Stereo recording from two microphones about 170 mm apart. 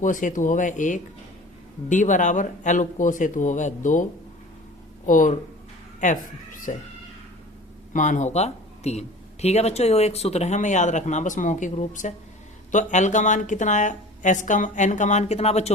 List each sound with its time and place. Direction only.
0.0 s speech: 50° left (ahead or behind)
5.0 s speech: 50° left (ahead or behind)
6.7 s speech: 50° left (ahead or behind)
7.9 s speech: 45° left (ahead or behind)